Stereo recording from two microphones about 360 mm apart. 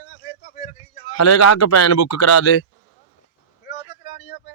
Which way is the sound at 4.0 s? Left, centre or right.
Left.